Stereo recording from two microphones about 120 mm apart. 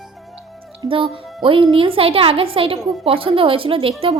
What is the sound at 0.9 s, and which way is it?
Speech, 45° right (ahead or behind).